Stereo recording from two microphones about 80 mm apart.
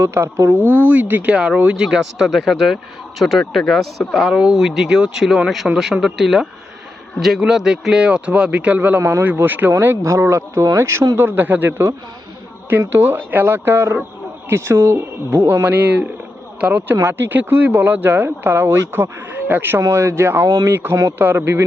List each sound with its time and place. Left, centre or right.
0.0 s speech: right
0.9 s speech: right
10.0 s speech: right
19.8 s speech: right
20.7 s speech: right